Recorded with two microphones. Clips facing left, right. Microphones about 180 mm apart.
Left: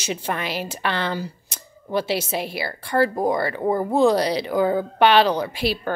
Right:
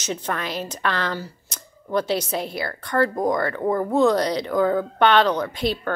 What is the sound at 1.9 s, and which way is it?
Speech, 5° left (ahead or behind).